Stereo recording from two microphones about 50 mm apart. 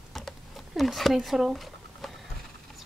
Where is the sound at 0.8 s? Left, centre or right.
Centre.